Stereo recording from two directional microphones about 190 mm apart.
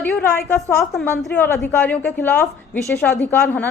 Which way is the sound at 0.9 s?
Centre (ahead or behind).